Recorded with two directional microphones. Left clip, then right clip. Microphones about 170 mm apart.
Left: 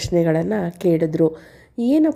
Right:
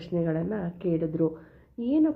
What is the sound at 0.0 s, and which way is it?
A woman's voice, 45° left (ahead or behind).